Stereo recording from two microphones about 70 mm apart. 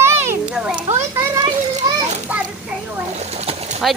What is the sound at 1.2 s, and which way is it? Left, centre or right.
Children playing, right.